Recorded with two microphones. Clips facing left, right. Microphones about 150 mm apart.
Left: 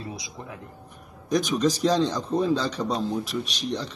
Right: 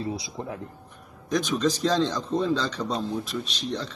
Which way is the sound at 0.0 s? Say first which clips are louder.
Right 6 dB; 30° right (ahead or behind).